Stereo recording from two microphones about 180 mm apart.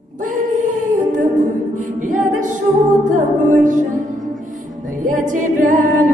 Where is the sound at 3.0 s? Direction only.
45° right (ahead or behind).